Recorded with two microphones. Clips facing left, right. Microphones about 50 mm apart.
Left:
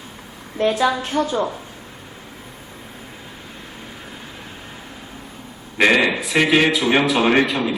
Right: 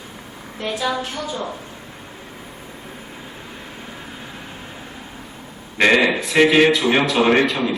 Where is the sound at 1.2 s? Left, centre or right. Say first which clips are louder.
Left 7 dB; left.